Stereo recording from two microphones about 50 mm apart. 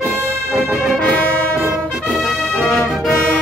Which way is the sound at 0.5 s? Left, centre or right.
Centre.